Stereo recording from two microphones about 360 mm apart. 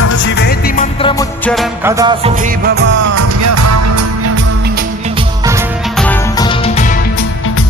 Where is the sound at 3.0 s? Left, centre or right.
Right.